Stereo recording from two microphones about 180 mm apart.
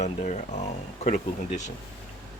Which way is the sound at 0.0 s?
40° left (ahead or behind).